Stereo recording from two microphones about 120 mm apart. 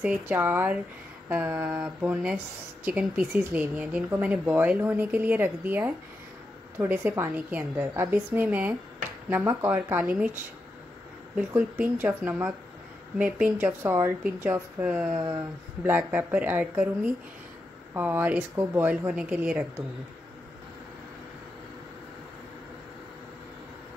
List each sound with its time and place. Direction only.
0.0 s speech: 10° right (ahead or behind)
10.0 s a woman's voice: 5° right (ahead or behind)
11.3 s speech: 10° right (ahead or behind)